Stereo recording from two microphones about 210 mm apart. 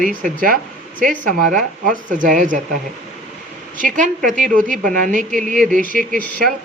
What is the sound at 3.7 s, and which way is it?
Speech, 40° right (ahead or behind).